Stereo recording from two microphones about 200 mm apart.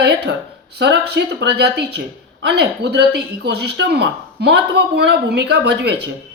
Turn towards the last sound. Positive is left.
turn(degrees=-55)  # may be behind; listen again after turning